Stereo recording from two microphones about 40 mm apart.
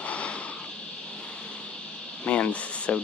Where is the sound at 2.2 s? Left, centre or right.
Left.